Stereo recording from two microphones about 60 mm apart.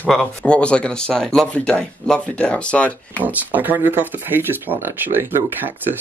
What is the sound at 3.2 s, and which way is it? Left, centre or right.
Speech, right.